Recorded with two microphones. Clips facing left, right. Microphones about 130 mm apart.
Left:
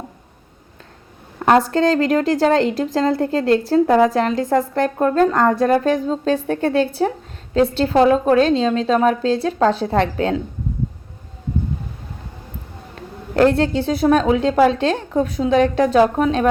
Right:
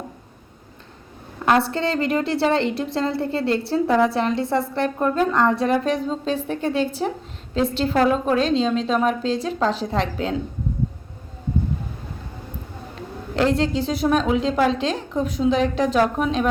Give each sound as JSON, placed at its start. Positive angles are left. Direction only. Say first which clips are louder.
{"t": 1.5, "sound": "a woman's voice", "louder": "left 5 dB", "side_deg": 40}
{"t": 13.3, "sound": "a woman's voice", "louder": "left 5 dB", "side_deg": 50}